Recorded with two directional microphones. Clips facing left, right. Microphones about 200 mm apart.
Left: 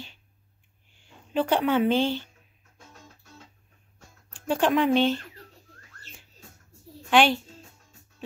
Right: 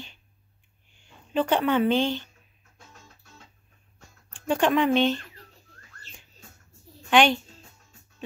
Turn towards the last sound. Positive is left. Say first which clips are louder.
# right 1 dB
turn(degrees=5)  # may be behind; listen again after turning